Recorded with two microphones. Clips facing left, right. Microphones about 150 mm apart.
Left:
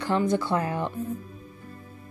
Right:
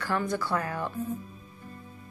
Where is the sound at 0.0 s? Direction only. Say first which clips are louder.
Left 5 dB; 20° left (ahead or behind).